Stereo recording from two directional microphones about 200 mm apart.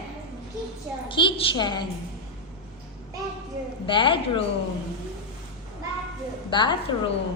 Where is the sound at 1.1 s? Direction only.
25° left (ahead or behind).